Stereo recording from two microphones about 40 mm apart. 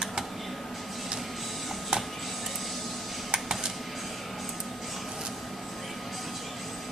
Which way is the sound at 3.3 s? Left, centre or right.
Centre.